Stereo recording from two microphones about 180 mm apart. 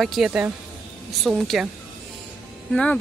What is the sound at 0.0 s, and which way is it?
Speech, centre (ahead or behind).